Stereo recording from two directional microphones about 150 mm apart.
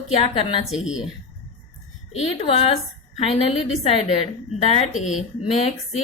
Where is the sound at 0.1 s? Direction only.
45° left (ahead or behind).